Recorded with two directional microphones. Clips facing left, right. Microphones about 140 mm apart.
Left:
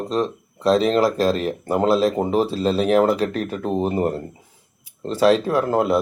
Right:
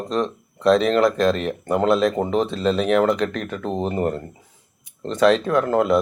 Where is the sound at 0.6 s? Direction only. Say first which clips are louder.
Right 1 dB; 30° left (ahead or behind).